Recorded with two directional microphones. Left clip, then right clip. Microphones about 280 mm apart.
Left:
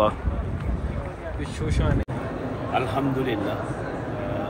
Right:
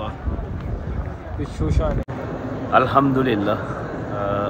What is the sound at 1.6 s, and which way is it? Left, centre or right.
Speech, right.